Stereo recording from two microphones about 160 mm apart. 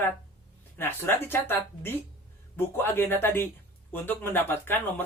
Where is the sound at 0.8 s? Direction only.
15° left (ahead or behind).